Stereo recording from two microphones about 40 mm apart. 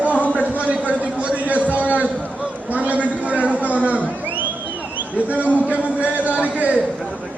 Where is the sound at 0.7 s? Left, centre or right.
Right.